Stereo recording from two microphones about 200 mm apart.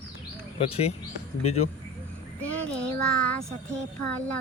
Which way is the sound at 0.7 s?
30° left (ahead or behind).